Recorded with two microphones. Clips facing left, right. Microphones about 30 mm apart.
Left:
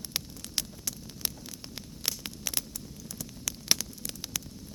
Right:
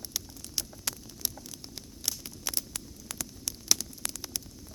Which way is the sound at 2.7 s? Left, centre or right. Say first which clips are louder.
Right 1 dB; right.